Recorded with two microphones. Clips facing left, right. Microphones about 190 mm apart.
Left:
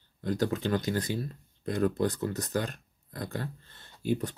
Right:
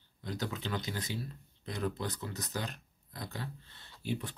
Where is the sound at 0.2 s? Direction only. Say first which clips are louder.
Left 9 dB; 50° left (ahead or behind).